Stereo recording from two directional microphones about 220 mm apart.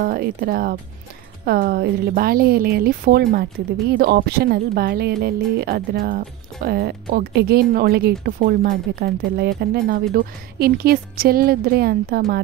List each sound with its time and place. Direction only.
0.0 s speech: 40° right (ahead or behind)